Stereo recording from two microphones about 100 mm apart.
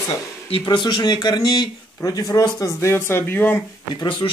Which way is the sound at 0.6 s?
50° left (ahead or behind).